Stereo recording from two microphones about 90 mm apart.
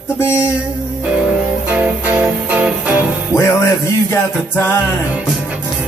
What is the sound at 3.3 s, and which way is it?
Music, 30° left (ahead or behind).